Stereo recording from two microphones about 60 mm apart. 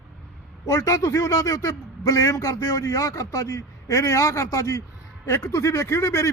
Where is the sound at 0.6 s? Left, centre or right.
Left.